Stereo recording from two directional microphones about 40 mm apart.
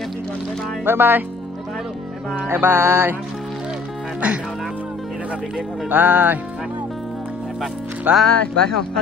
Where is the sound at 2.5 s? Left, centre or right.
Right.